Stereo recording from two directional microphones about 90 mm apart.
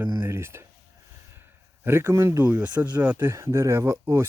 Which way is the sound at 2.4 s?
15° right (ahead or behind).